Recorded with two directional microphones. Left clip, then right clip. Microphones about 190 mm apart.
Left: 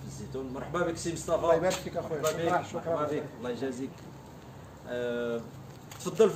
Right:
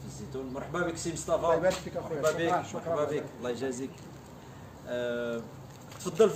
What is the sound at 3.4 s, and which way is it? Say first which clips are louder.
Speech: right 1 dB; 65° right (ahead or behind).